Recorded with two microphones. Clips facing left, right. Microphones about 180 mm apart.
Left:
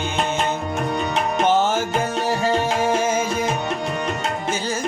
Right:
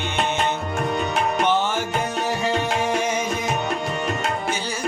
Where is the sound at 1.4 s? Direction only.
45° left (ahead or behind).